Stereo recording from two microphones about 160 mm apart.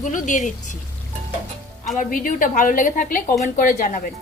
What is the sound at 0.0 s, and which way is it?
Speech, 50° left (ahead or behind).